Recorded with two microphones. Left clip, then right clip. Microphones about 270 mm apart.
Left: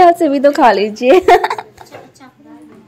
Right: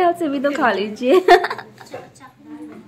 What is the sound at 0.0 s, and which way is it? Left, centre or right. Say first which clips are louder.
A woman's voice: left 9 dB; left.